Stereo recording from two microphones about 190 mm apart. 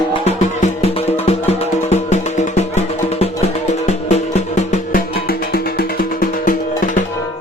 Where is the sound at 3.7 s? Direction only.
35° left (ahead or behind).